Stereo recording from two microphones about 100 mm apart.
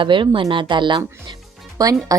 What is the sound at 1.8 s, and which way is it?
Speech, 35° right (ahead or behind).